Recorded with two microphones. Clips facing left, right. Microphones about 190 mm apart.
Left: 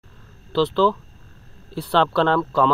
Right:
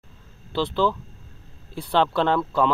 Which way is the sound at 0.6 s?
10° right (ahead or behind).